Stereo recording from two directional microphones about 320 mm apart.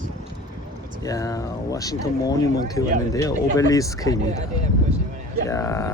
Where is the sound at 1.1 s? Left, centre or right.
Centre.